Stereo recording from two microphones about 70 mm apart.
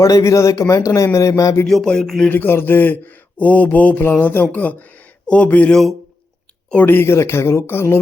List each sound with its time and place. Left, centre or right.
0.0 s speech: left
1.6 s a sound: centre
2.3 s speech: left
6.8 s speech: left